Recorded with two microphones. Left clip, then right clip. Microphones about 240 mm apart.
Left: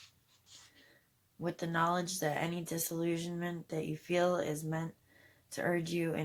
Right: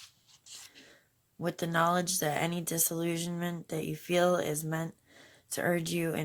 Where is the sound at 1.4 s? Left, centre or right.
Right.